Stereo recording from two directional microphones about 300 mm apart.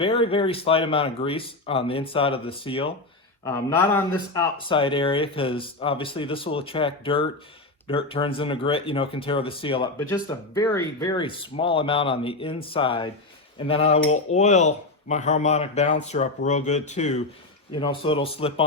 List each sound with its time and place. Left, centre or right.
0.0 s speech: centre